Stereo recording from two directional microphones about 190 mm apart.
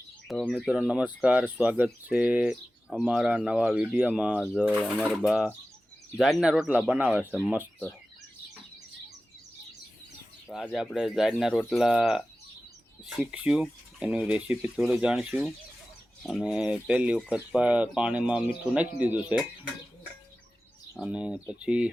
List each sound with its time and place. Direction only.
0.3 s speech: centre (ahead or behind)
10.5 s speech: centre (ahead or behind)
21.0 s speech: 5° right (ahead or behind)